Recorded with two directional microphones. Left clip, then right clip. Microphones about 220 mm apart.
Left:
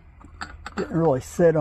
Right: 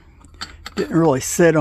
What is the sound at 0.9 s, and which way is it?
Speech, 70° right (ahead or behind).